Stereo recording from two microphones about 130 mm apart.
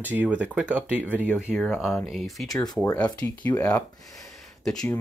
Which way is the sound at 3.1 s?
10° left (ahead or behind).